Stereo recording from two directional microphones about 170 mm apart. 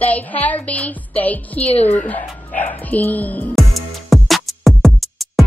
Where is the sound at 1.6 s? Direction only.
35° left (ahead or behind).